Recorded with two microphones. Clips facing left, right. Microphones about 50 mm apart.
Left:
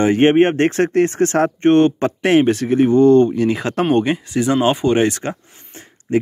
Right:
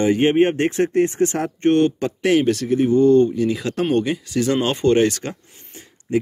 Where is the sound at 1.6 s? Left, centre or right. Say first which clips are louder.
Left 2 dB; left.